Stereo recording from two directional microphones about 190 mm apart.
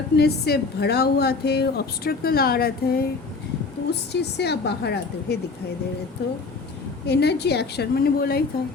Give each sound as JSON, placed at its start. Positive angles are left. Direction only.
{"t": 0.2, "sound": "a woman's voice", "side_deg": 55}
{"t": 4.1, "sound": "a woman's voice", "side_deg": 60}
{"t": 7.1, "sound": "a woman's voice", "side_deg": 60}